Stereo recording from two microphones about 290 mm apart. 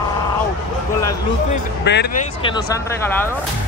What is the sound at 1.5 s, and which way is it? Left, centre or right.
Speech, left.